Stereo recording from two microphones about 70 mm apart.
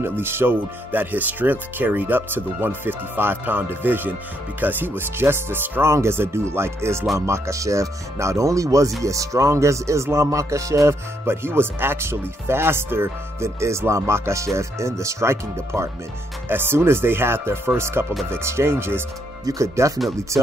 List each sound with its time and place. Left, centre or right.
0.0 s speech: right
19.4 s speech: right